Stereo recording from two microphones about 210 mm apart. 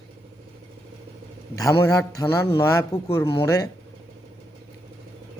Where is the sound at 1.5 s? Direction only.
15° left (ahead or behind).